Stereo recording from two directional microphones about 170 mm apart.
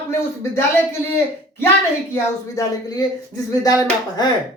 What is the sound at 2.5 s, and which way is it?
Speech, 20° left (ahead or behind).